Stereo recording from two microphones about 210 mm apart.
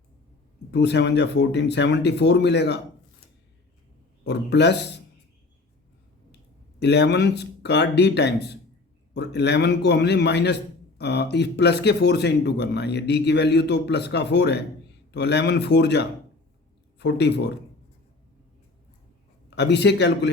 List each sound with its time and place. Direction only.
0.7 s speech: 55° left (ahead or behind)
4.2 s speech: 55° left (ahead or behind)
6.7 s a man's voice: 55° left (ahead or behind)
19.5 s speech: 55° left (ahead or behind)